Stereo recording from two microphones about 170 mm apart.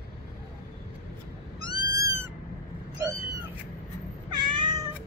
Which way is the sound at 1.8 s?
20° right (ahead or behind).